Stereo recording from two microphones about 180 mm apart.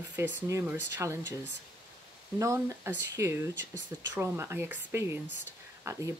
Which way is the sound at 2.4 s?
15° right (ahead or behind).